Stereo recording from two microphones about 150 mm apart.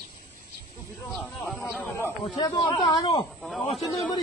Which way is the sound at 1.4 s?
15° left (ahead or behind).